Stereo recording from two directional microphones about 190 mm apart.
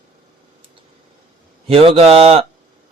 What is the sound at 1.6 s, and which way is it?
Speech, 30° right (ahead or behind).